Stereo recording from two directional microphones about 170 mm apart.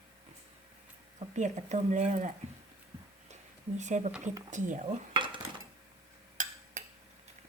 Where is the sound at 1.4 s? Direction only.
45° right (ahead or behind).